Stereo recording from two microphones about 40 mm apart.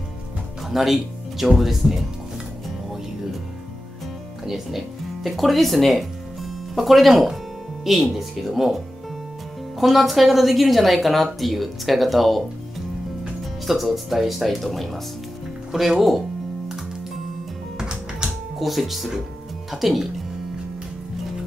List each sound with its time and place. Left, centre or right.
0.7 s speech: centre
4.5 s speech: centre
15.7 s music: centre
17.7 s music: centre
18.6 s speech: centre